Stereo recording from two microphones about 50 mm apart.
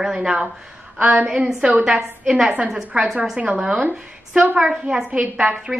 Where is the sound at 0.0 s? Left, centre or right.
Centre.